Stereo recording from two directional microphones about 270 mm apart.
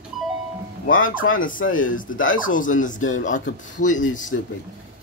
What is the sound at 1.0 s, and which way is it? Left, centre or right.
Speech, left.